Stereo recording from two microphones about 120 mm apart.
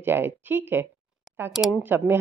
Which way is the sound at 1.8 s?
15° right (ahead or behind).